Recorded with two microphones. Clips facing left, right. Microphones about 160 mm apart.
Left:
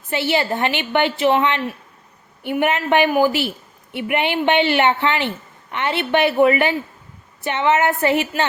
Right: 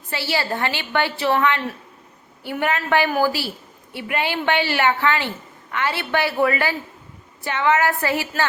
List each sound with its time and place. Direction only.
0.1 s a woman's voice: 20° left (ahead or behind)